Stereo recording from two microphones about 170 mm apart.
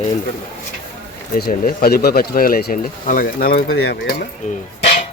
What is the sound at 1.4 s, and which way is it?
Speech, 60° left (ahead or behind).